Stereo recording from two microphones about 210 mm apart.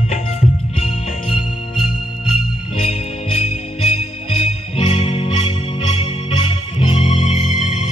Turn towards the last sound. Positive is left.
turn(degrees=35)  # may be behind; listen again after turning